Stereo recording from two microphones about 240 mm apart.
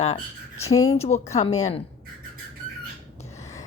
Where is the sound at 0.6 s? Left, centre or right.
Centre.